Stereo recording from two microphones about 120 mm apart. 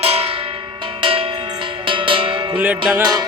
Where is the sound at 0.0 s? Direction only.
55° right (ahead or behind).